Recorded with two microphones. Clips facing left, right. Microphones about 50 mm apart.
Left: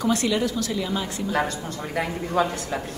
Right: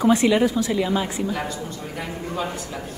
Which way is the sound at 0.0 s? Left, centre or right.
Right.